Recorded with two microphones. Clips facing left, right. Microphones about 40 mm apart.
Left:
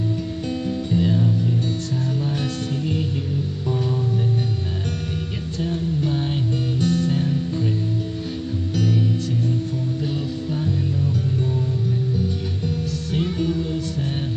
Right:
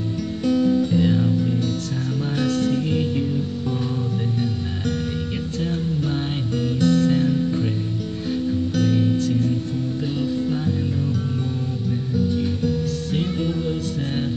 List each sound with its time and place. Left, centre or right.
0.7 s guitar: centre
6.8 s music: right
13.1 s music: right